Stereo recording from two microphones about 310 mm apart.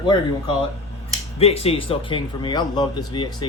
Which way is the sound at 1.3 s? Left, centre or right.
Centre.